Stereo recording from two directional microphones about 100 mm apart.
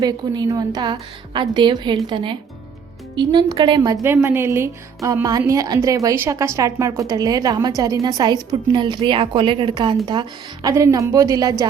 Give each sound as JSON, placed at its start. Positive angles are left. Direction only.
{"t": 0.0, "sound": "a woman's voice", "side_deg": -40}
{"t": 3.2, "sound": "a woman's voice", "side_deg": -45}
{"t": 4.0, "sound": "a woman's voice", "side_deg": -20}